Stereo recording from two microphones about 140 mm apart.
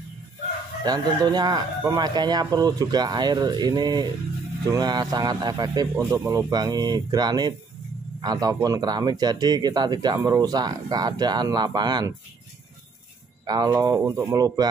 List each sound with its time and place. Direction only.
0.8 s speech: 30° right (ahead or behind)
13.5 s speech: 30° right (ahead or behind)